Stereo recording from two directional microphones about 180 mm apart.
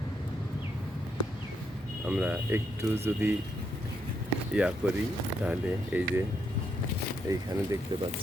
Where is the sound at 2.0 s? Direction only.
5° right (ahead or behind).